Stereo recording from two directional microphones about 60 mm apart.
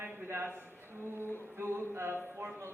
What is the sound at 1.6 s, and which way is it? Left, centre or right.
Speech, right.